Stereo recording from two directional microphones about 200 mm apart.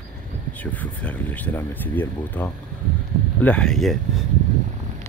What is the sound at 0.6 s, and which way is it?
Speech, 5° left (ahead or behind).